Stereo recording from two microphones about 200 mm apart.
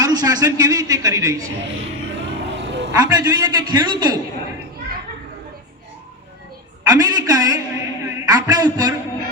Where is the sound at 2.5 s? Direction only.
60° right (ahead or behind).